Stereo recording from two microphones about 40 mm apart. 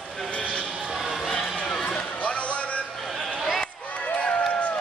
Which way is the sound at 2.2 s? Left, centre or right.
Left.